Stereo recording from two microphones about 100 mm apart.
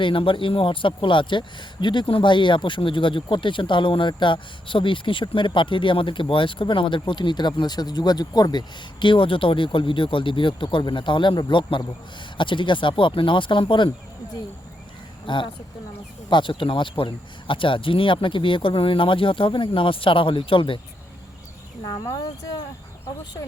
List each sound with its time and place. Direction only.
0.0 s speech: 60° left (ahead or behind)
15.3 s speech: 55° left (ahead or behind)
22.1 s speech: 40° left (ahead or behind)